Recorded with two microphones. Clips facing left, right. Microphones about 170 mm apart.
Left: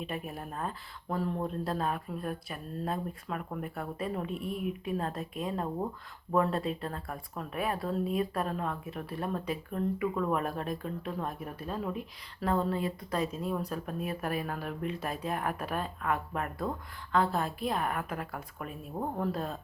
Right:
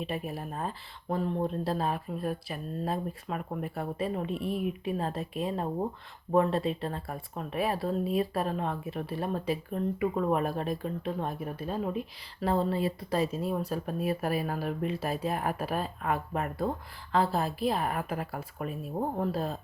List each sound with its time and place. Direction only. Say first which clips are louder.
0.1 s speech: right 3 dB; 30° right (ahead or behind)